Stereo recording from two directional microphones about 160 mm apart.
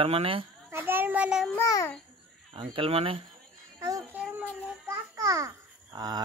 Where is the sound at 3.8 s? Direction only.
20° right (ahead or behind).